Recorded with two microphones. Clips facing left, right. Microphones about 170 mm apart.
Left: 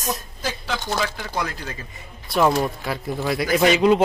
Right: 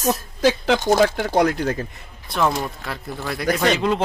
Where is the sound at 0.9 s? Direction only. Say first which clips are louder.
Right 9 dB; 45° right (ahead or behind).